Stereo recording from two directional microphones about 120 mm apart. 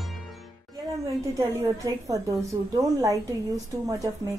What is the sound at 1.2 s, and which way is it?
A woman's voice, 25° right (ahead or behind).